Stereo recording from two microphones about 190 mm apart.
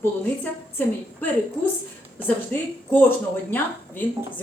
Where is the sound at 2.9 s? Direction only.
10° left (ahead or behind).